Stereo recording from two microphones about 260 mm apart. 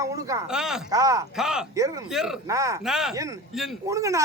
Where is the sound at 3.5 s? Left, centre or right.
Centre.